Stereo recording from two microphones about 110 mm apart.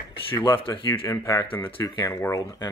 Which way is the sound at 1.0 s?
25° left (ahead or behind).